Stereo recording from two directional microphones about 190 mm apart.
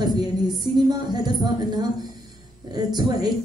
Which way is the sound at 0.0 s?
20° right (ahead or behind).